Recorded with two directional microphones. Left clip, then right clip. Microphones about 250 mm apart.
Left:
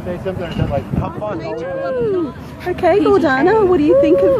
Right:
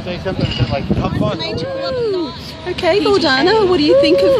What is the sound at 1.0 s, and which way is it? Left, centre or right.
Speech, centre.